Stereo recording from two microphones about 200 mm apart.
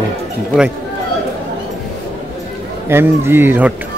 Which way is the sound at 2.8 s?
10° right (ahead or behind).